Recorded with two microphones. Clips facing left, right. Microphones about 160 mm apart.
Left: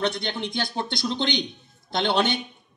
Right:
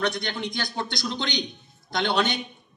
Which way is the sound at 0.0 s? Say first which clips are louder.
Left 1 dB; 25° left (ahead or behind).